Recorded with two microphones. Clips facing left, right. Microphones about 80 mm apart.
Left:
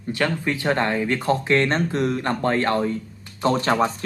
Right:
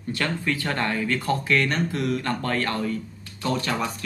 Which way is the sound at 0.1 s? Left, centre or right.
Centre.